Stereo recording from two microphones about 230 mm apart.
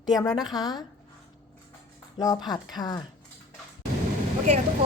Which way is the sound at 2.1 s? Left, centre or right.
Centre.